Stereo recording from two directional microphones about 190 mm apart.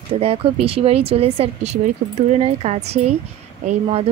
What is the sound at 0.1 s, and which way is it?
Speech, 30° right (ahead or behind).